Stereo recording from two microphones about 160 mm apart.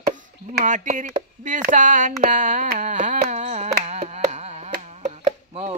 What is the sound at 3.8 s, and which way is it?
Carnatic music, 45° right (ahead or behind).